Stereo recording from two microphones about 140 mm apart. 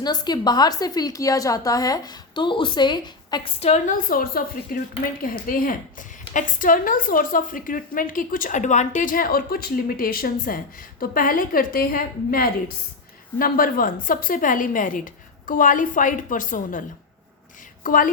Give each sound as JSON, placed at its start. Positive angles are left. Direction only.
{"t": 0.0, "sound": "a woman's voice", "side_deg": 30}
{"t": 3.6, "sound": "a woman's voice", "side_deg": 50}
{"t": 3.9, "sound": "a woman's voice", "side_deg": 85}
{"t": 17.8, "sound": "a woman's voice", "side_deg": 75}